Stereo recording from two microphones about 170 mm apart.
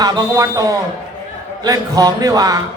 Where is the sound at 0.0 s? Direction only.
20° right (ahead or behind).